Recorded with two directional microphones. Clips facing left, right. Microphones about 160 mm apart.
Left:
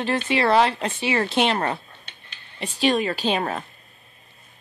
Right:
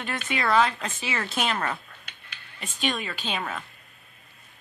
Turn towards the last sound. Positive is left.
turn(degrees=40)  # may be behind; listen again after turning